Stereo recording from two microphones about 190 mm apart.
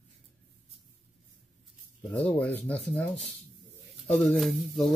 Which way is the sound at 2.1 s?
5° left (ahead or behind).